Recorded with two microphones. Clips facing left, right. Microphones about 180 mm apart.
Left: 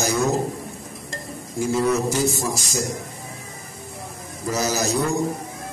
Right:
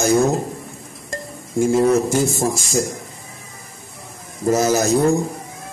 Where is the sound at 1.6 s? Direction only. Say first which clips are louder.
Right 5 dB; 50° right (ahead or behind).